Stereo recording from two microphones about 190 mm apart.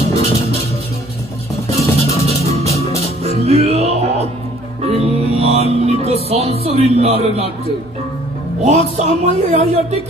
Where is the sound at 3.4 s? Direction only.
35° right (ahead or behind).